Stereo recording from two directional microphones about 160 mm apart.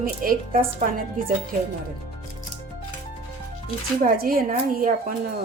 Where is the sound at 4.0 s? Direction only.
65° right (ahead or behind).